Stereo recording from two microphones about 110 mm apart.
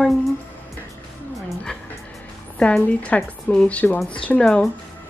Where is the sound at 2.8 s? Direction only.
15° left (ahead or behind).